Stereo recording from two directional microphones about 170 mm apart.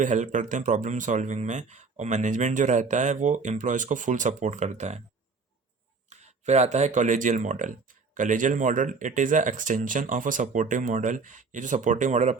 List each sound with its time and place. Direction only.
0.0 s speech: 50° right (ahead or behind)
6.1 s speech: 40° right (ahead or behind)